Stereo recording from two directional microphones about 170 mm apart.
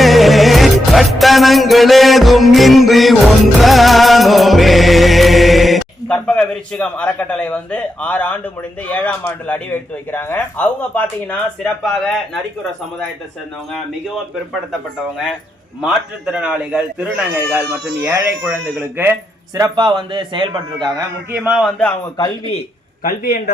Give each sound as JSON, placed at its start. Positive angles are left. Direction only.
{"t": 0.0, "sound": "music", "side_deg": 0}
{"t": 8.9, "sound": "speech", "side_deg": 10}
{"t": 15.8, "sound": "speech", "side_deg": -5}
{"t": 19.5, "sound": "a man's voice", "side_deg": -25}
{"t": 21.4, "sound": "a man's voice", "side_deg": 0}
{"t": 23.0, "sound": "a man's voice", "side_deg": 60}